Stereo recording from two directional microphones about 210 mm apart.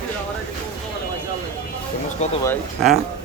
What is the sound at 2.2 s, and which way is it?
Speech, 35° left (ahead or behind).